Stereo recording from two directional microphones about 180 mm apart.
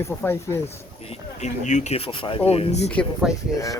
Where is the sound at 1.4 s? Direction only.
40° left (ahead or behind).